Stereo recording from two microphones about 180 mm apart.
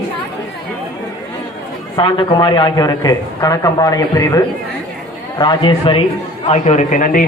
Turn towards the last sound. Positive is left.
turn(degrees=45)  # may be behind; listen again after turning